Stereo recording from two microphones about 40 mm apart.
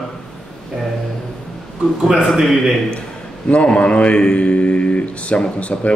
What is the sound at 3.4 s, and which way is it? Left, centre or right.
A man's voice, left.